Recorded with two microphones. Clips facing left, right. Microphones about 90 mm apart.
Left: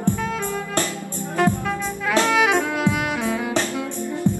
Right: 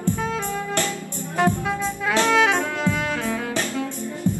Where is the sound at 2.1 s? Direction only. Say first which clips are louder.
Left 1 dB; 15° left (ahead or behind).